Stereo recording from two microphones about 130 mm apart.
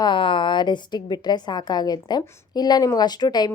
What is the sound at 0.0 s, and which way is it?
A woman's voice, 40° left (ahead or behind).